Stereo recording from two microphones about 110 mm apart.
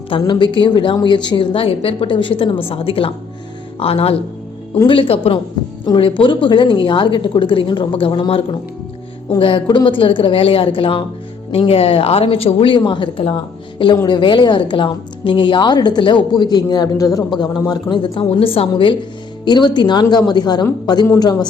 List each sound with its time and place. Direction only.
0.1 s a woman's voice: 50° left (ahead or behind)
9.4 s a woman's voice: 45° left (ahead or behind)
19.5 s a man's voice: 45° left (ahead or behind)